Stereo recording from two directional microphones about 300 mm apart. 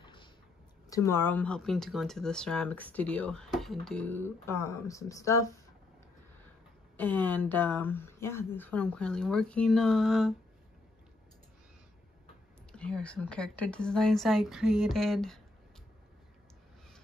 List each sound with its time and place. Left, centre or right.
0.0 s a sound: centre
0.8 s speech: centre
7.0 s speech: centre
12.7 s speech: centre